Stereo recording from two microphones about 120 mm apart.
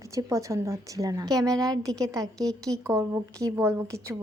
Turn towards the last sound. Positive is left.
turn(degrees=-25)  # may be behind; listen again after turning